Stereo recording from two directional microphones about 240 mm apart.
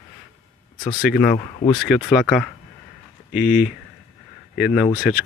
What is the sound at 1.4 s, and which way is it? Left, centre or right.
Speech, left.